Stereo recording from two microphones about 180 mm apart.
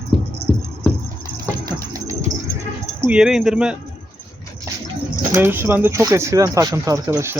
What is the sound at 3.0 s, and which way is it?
Speech, 5° right (ahead or behind).